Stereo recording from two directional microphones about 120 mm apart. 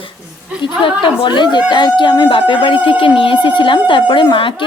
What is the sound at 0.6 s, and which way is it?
Speech, 45° left (ahead or behind).